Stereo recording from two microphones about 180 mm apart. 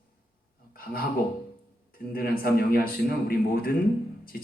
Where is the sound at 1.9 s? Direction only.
55° left (ahead or behind).